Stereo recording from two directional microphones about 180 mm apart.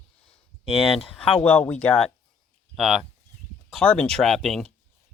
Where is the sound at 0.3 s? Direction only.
30° left (ahead or behind).